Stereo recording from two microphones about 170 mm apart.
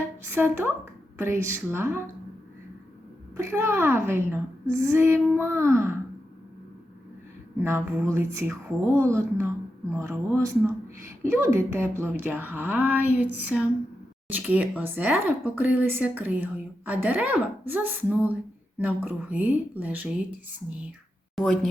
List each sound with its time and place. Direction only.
0.3 s speech: 10° right (ahead or behind)
3.3 s speech: 15° right (ahead or behind)
7.6 s speech: 15° right (ahead or behind)
21.3 s speech: centre (ahead or behind)